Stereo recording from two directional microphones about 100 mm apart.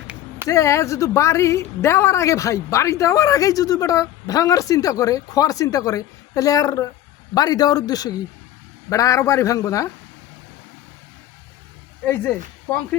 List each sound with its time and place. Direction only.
0.4 s a woman's voice: 30° left (ahead or behind)
12.0 s speech: 20° left (ahead or behind)